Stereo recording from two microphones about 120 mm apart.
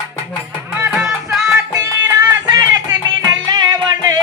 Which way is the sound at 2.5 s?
35° right (ahead or behind).